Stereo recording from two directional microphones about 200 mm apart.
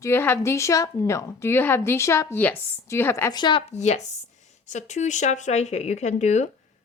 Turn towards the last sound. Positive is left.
turn(degrees=35)  # may be behind; listen again after turning